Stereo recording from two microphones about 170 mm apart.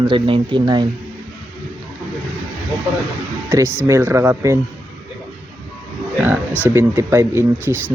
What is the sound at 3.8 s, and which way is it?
Speech, 15° right (ahead or behind).